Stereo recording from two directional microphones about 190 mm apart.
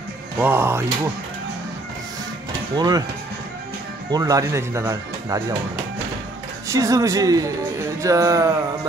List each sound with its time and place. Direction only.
0.4 s speech: 10° right (ahead or behind)
2.7 s speech: 20° right (ahead or behind)
4.1 s speech: 20° right (ahead or behind)
6.7 s speech: 15° right (ahead or behind)